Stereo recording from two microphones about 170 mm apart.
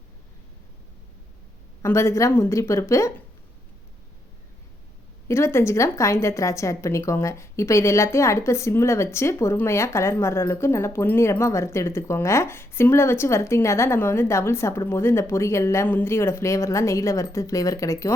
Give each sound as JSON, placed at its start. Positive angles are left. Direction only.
{"t": 1.8, "sound": "a woman's voice", "side_deg": 15}
{"t": 5.3, "sound": "a woman's voice", "side_deg": 15}